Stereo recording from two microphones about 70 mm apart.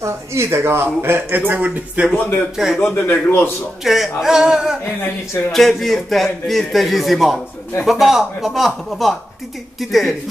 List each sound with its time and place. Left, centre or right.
0.0 s speech: right
2.1 s speech: left
2.5 s a man's voice: centre
2.8 s a man's voice: left
3.8 s a man's voice: centre
5.5 s a man's voice: centre